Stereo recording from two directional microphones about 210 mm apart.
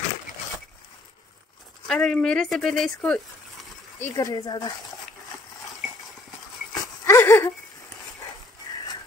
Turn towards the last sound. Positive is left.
turn(degrees=10)  # may be behind; listen again after turning